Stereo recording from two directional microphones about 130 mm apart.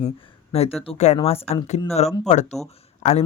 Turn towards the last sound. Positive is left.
turn(degrees=60)  # may be behind; listen again after turning